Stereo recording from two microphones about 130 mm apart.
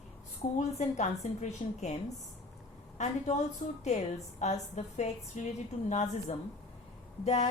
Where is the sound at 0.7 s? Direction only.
60° left (ahead or behind).